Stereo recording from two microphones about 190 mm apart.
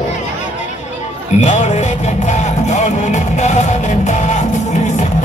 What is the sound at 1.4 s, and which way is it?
Music, 40° left (ahead or behind).